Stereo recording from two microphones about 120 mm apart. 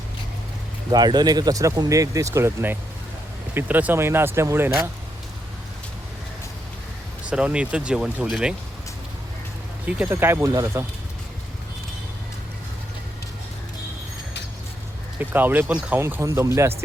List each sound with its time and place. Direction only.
0.9 s speech: 35° right (ahead or behind)
7.3 s speech: 10° right (ahead or behind)
9.8 s speech: 15° right (ahead or behind)
10.5 s speech: 30° right (ahead or behind)
15.2 s speech: 15° right (ahead or behind)